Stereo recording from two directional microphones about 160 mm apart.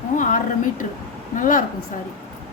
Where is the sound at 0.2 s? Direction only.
55° left (ahead or behind).